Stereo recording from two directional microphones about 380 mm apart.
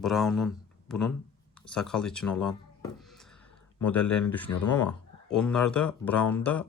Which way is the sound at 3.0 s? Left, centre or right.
Centre.